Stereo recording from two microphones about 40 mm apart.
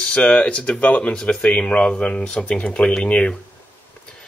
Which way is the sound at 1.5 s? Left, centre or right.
Left.